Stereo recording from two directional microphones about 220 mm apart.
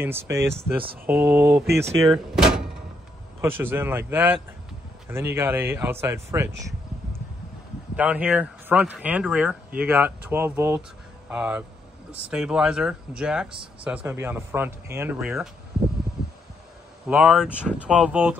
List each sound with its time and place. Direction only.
0.0 s speech: 10° right (ahead or behind)
1.5 s speech: 50° right (ahead or behind)
2.0 s speech: centre (ahead or behind)
7.9 s speech: 5° right (ahead or behind)
17.1 s speech: 5° right (ahead or behind)